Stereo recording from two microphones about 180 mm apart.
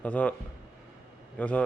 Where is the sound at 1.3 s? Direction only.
10° left (ahead or behind).